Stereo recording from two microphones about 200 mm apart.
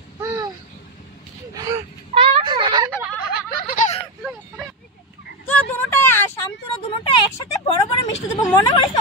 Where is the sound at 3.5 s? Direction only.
45° left (ahead or behind).